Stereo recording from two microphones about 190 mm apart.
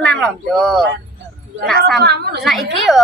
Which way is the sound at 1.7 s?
55° right (ahead or behind).